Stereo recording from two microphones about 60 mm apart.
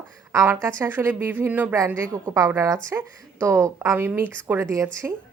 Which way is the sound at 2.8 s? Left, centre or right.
Right.